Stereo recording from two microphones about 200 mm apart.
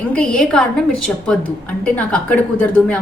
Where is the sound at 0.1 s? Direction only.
5° left (ahead or behind).